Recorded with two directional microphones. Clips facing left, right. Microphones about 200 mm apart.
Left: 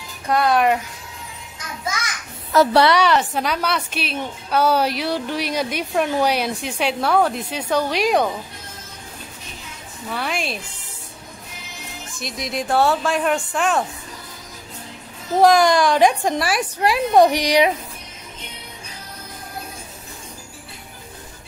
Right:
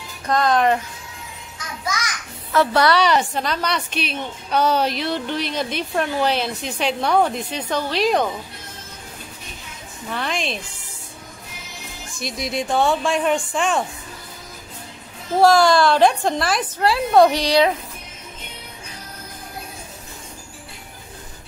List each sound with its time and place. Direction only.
0.3 s a woman's voice: 10° left (ahead or behind)
2.5 s a woman's voice: 40° left (ahead or behind)
3.0 s a woman's voice: 5° left (ahead or behind)
10.0 s a woman's voice: 5° left (ahead or behind)
12.2 s speech: centre (ahead or behind)
15.4 s a woman's voice: 15° left (ahead or behind)